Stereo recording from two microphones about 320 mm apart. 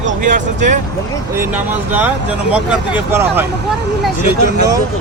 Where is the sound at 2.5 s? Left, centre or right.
Centre.